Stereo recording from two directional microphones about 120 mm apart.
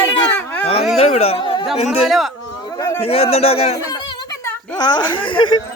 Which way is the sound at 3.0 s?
55° left (ahead or behind).